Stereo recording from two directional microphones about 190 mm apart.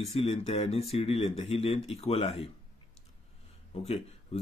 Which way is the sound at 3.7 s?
30° left (ahead or behind).